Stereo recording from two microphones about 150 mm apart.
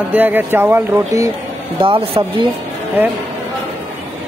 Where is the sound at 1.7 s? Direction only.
35° right (ahead or behind).